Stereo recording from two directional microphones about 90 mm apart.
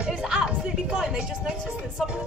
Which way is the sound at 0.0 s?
10° right (ahead or behind).